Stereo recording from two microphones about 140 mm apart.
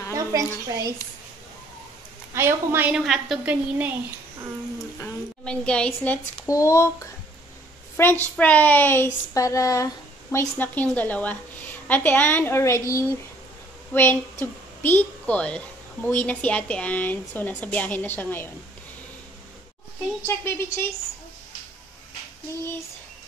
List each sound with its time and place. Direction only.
0.1 s a woman's voice: 25° right (ahead or behind)
2.3 s a woman's voice: 15° right (ahead or behind)
3.1 s a woman's voice: centre (ahead or behind)
5.0 s a woman's voice: 10° left (ahead or behind)
6.4 s a woman's voice: 20° left (ahead or behind)
20.2 s a woman's voice: 15° left (ahead or behind)